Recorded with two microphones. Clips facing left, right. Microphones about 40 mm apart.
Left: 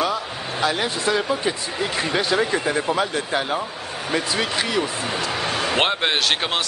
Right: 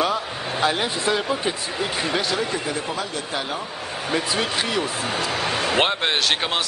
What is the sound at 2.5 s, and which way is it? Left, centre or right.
Speech, left.